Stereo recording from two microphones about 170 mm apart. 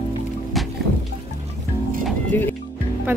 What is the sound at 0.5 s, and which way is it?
Music, centre (ahead or behind).